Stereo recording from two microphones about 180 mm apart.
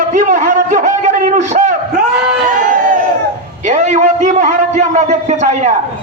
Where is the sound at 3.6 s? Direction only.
40° right (ahead or behind).